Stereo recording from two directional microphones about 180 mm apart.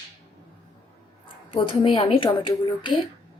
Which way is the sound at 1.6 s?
30° left (ahead or behind).